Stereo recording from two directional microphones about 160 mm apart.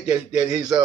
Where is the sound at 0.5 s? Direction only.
25° right (ahead or behind).